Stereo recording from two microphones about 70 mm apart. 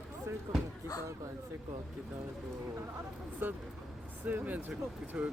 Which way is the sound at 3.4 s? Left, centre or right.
Right.